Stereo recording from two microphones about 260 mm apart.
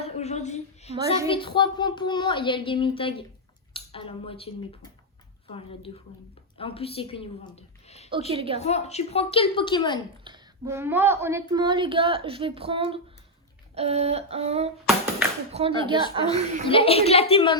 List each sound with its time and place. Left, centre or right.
0.0 s a woman's voice: left
8.3 s a sound: right
8.5 s speech: left
10.2 s speech: centre
13.7 s a sound: right
16.6 s speech: left